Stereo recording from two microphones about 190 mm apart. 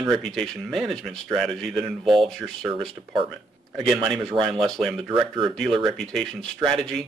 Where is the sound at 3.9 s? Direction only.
25° right (ahead or behind).